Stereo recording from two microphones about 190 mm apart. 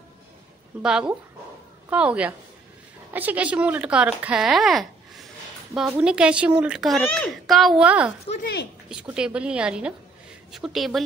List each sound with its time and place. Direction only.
0.8 s a woman's voice: 5° right (ahead or behind)
8.4 s speech: 65° left (ahead or behind)
8.8 s a woman's voice: 5° right (ahead or behind)